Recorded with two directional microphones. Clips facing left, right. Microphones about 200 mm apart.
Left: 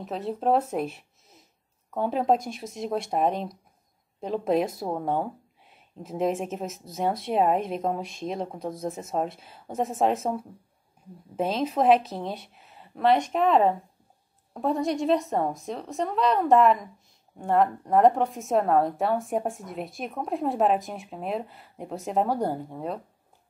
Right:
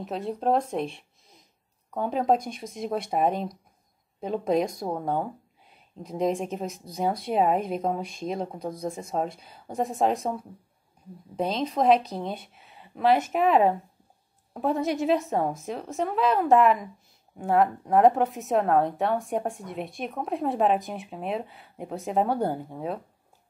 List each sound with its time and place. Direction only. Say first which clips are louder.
0.0 s speech: even; centre (ahead or behind)